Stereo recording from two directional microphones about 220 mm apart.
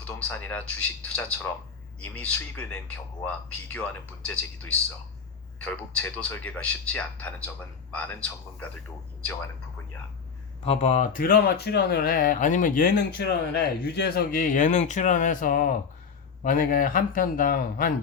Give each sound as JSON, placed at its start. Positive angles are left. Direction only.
{"t": 0.0, "sound": "speech", "side_deg": 10}
{"t": 10.6, "sound": "speech", "side_deg": 25}